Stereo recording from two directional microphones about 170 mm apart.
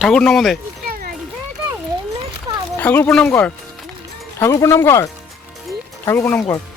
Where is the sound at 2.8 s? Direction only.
10° left (ahead or behind).